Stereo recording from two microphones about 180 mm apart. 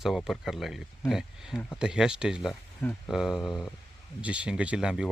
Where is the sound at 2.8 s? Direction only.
10° left (ahead or behind).